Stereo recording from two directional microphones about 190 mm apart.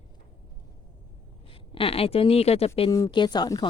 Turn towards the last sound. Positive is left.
turn(degrees=20)  # may be behind; listen again after turning